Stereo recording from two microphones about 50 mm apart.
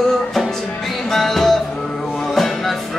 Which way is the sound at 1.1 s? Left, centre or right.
Centre.